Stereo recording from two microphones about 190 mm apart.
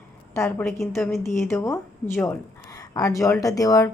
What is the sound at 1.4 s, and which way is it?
A woman's voice, 15° left (ahead or behind).